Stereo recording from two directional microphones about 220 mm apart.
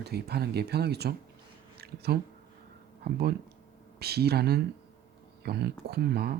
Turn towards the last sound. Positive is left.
turn(degrees=-45)  # may be behind; listen again after turning